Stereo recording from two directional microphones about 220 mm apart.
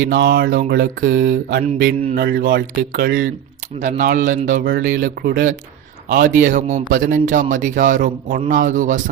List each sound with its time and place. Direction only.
0.0 s mantra: 45° right (ahead or behind)
3.8 s speech: 35° right (ahead or behind)